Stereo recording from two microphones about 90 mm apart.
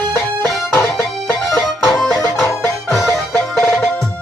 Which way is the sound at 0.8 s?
25° left (ahead or behind).